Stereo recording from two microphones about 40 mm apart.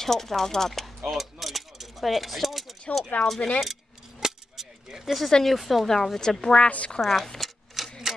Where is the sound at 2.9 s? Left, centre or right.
Left.